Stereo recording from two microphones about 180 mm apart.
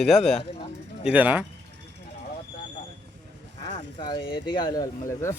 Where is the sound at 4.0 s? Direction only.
25° left (ahead or behind).